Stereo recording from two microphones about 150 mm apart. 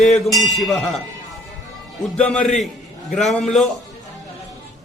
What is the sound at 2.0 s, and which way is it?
A man's voice, 5° left (ahead or behind).